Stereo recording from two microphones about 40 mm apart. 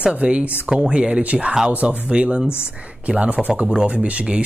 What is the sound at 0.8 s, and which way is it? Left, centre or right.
Speech, right.